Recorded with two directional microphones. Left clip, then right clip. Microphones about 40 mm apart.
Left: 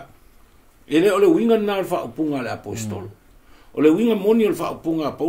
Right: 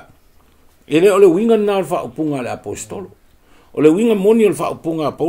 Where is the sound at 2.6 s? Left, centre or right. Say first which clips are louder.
Right 4 dB; right.